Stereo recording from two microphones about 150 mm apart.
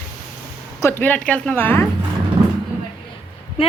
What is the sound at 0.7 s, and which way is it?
A woman's voice, 20° left (ahead or behind).